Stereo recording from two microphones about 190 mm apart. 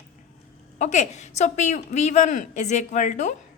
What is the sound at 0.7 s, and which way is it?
A woman's voice, 40° left (ahead or behind).